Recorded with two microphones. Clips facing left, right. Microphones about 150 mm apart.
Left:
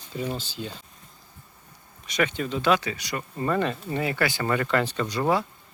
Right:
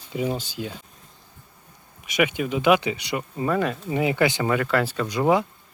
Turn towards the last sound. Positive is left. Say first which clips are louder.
# right 3 dB
turn(degrees=-15)  # may be behind; listen again after turning